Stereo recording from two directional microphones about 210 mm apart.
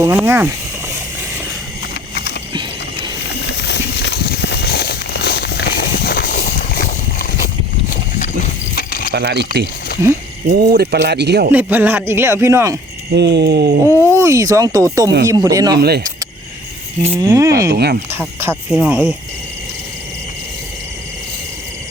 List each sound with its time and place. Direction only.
0.0 s speech: 10° right (ahead or behind)
2.5 s mechanisms: 20° right (ahead or behind)
3.4 s a sound: 55° left (ahead or behind)
8.7 s a sound: 45° left (ahead or behind)
9.1 s speech: 55° right (ahead or behind)
11.5 s speech: 10° right (ahead or behind)
13.1 s speech: 55° right (ahead or behind)
13.8 s speech: 10° right (ahead or behind)
15.8 s speech: 50° right (ahead or behind)
17.0 s speech: 15° right (ahead or behind)
17.7 s speech: 50° right (ahead or behind)
18.1 s speech: 10° right (ahead or behind)